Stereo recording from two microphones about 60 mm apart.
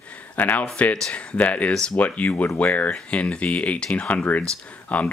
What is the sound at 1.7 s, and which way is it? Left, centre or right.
Speech, centre.